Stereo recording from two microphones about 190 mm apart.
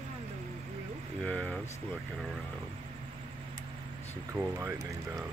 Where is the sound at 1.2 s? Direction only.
5° left (ahead or behind).